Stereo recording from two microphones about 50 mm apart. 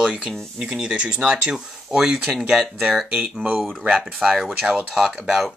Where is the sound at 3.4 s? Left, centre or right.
Centre.